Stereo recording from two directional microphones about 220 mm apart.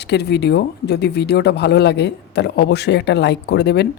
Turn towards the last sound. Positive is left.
turn(degrees=50)  # may be behind; listen again after turning